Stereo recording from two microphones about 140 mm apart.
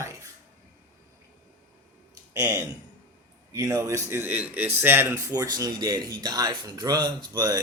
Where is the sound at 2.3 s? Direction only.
25° right (ahead or behind).